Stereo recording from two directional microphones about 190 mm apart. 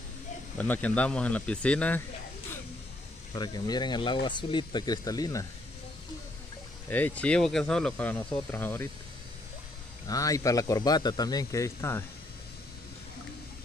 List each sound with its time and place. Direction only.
0.6 s a man's voice: 10° left (ahead or behind)
3.3 s speech: 20° left (ahead or behind)
6.9 s a man's voice: 10° left (ahead or behind)
10.0 s a man's voice: 15° left (ahead or behind)